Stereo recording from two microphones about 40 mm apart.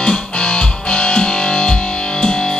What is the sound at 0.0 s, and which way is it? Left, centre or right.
Music, left.